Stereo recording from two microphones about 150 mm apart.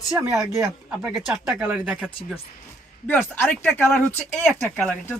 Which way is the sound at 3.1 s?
10° left (ahead or behind).